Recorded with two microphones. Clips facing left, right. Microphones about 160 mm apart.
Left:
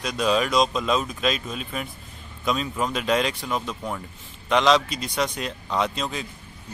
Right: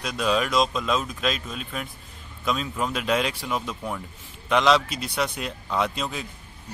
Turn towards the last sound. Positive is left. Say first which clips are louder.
# left 1 dB
turn(degrees=-5)  # may be behind; listen again after turning